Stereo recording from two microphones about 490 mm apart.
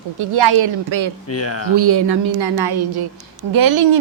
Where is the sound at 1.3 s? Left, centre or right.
Left.